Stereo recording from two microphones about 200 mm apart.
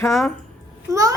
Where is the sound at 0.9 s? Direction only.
15° right (ahead or behind).